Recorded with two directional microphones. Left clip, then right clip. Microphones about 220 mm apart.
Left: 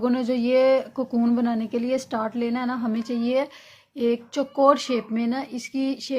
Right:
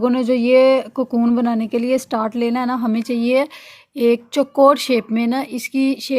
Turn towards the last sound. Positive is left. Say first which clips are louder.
# right 7 dB
turn(degrees=-30)  # may be behind; listen again after turning